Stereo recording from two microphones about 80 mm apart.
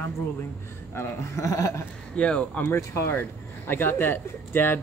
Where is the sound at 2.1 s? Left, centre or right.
Centre.